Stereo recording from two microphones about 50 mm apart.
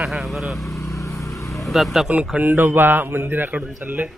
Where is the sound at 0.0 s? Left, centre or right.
Centre.